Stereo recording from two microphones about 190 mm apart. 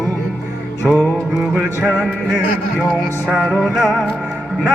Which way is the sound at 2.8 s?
10° left (ahead or behind).